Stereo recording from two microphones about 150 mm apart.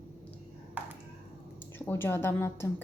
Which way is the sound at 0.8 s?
10° right (ahead or behind).